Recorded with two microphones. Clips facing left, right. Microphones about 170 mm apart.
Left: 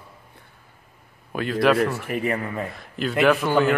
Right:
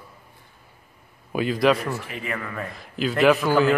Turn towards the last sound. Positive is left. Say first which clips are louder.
# right 1 dB
turn(degrees=0)  # may be behind; listen again after turning